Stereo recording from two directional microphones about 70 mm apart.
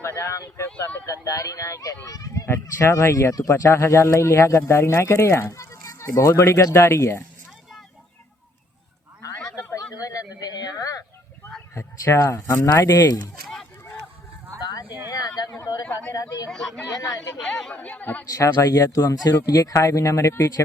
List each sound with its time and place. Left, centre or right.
0.0 s speech: left
2.5 s speech: left
9.7 s a sound: left
11.7 s speech: left
12.9 s speech: left
15.4 s a sound: left
16.1 s speech: left
16.5 s speech: centre
16.9 s speech: left
17.4 s speech: centre
17.7 s a woman's voice: left
18.3 s speech: left